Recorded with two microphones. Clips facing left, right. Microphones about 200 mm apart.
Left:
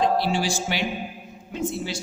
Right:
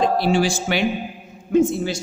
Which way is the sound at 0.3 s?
50° right (ahead or behind).